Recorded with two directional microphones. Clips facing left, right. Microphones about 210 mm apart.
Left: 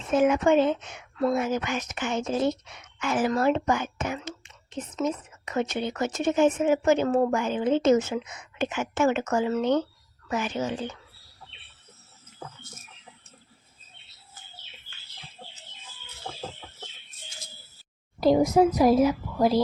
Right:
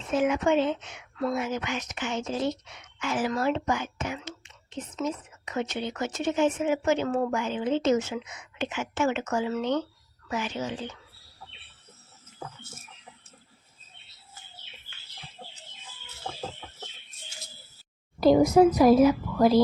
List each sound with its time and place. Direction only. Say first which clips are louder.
0.1 s speech: left 3 dB; 45° left (ahead or behind)
18.2 s a woman's voice: right 2 dB; centre (ahead or behind)